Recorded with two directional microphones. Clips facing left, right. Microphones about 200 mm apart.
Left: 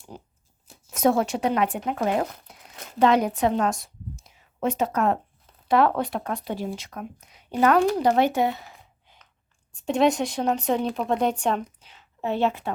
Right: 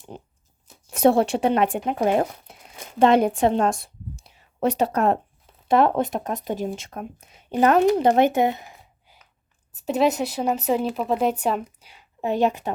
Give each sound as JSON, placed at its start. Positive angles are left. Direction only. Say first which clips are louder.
{"t": 0.1, "sound": "crunch", "louder": "right 2 dB", "side_deg": -25}
{"t": 0.9, "sound": "a sound", "louder": "right 4 dB", "side_deg": -30}
{"t": 1.4, "sound": "speech", "louder": "right 3 dB", "side_deg": -25}
{"t": 1.8, "sound": "speech", "louder": "right 3 dB", "side_deg": -15}
{"t": 2.0, "sound": "speech", "louder": "right 5 dB", "side_deg": -25}
{"t": 3.0, "sound": "a sound", "louder": "right 3 dB", "side_deg": -25}
{"t": 4.9, "sound": "speech", "louder": "right 2 dB", "side_deg": -30}